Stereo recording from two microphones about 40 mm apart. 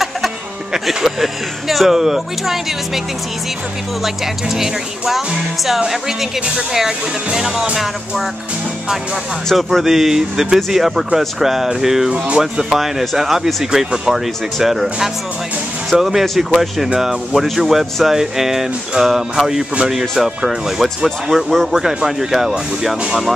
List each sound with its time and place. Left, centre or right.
0.8 s speech: centre
4.0 s speech: centre
9.5 s speech: centre
12.1 s speech: right
12.6 s speech: centre